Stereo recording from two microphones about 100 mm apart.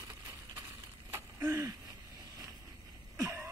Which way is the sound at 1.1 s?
25° right (ahead or behind).